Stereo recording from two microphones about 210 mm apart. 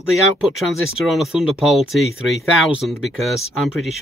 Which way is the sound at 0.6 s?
Centre (ahead or behind).